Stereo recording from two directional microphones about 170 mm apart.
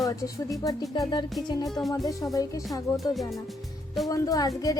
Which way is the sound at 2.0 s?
20° left (ahead or behind).